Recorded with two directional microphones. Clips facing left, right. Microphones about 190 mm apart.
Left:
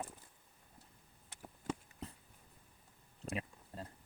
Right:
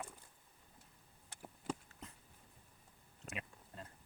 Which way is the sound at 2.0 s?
35° left (ahead or behind).